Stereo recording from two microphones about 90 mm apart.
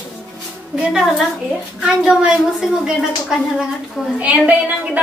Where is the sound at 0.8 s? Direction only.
5° right (ahead or behind).